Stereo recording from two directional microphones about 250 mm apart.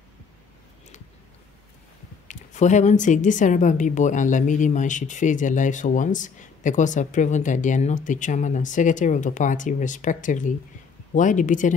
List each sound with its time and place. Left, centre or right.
2.2 s a woman's voice: left